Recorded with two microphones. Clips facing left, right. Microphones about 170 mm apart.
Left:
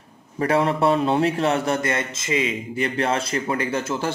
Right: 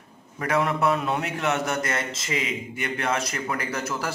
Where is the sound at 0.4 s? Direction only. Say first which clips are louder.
Left 4 dB; 30° left (ahead or behind).